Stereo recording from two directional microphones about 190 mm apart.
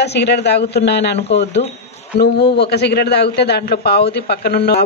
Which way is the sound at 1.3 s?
35° left (ahead or behind).